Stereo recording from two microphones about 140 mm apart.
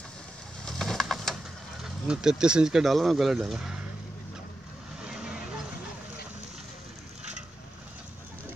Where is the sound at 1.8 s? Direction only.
5° right (ahead or behind).